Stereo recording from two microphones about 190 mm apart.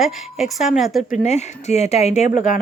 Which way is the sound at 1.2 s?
35° left (ahead or behind).